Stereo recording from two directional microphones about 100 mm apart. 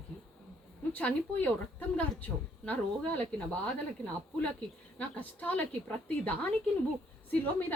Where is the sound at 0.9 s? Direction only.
15° left (ahead or behind).